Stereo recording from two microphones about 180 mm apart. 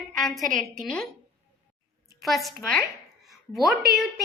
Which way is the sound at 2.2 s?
Centre (ahead or behind).